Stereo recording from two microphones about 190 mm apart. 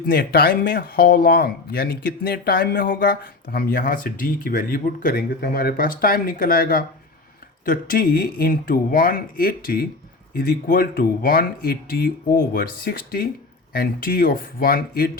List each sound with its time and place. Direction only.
0.0 s speech: 50° left (ahead or behind)